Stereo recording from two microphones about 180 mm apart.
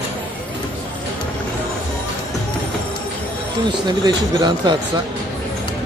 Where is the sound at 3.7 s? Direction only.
25° right (ahead or behind).